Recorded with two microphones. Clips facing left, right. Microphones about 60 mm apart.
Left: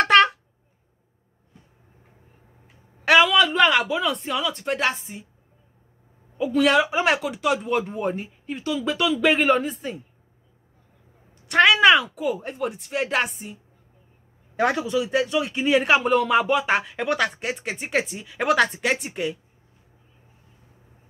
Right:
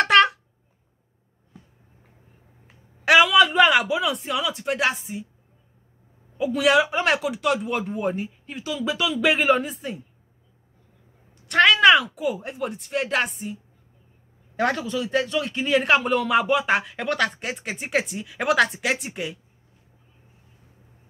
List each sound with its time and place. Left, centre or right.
0.0 s a sound: centre
3.1 s speech: centre
6.3 s speech: centre
11.4 s speech: centre
14.6 s speech: centre